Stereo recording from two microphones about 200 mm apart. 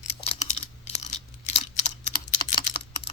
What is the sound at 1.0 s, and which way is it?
Computer keyboard, 35° left (ahead or behind).